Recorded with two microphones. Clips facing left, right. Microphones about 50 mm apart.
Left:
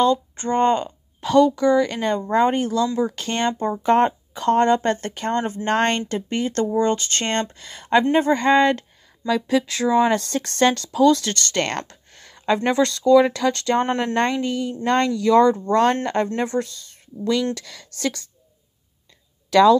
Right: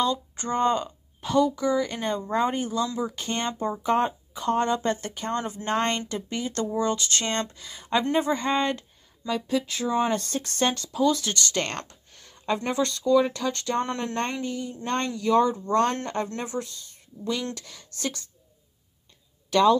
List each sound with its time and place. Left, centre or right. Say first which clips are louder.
0.0 s speech: left 7 dB; left
1.2 s a woman's voice: left 7 dB; left
5.4 s speech: left 7 dB; left
5.7 s speech: left 5 dB; left
11.6 s a sound: left 6 dB; left
12.6 s speech: left 7 dB; left
15.5 s a woman's voice: left 5 dB; left